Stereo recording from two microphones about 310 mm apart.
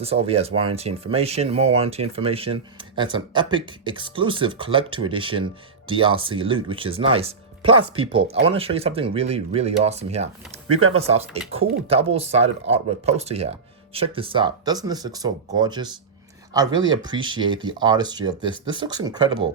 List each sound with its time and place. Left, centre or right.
0.0 s speech: centre